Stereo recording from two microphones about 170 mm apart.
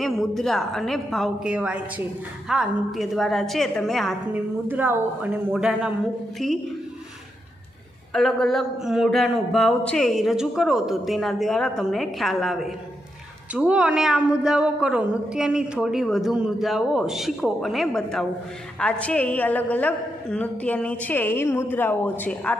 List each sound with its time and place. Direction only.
0.0 s a woman's voice: centre (ahead or behind)
4.3 s a woman's voice: 10° right (ahead or behind)
8.1 s a woman's voice: centre (ahead or behind)